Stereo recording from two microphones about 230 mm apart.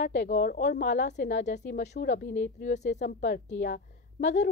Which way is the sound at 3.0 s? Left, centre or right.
Left.